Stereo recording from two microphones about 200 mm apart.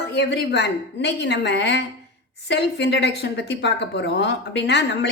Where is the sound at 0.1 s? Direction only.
55° left (ahead or behind).